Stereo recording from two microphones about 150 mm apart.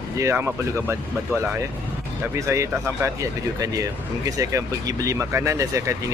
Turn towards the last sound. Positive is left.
turn(degrees=-20)  # may be behind; listen again after turning